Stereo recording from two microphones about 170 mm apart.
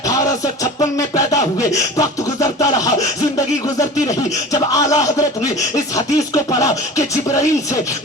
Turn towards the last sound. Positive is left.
turn(degrees=20)  # may be behind; listen again after turning